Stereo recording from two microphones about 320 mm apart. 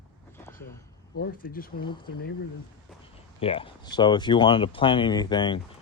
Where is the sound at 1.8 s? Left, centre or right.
Centre.